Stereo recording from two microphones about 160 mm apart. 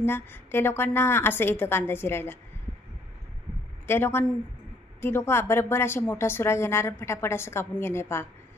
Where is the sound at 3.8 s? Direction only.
15° left (ahead or behind).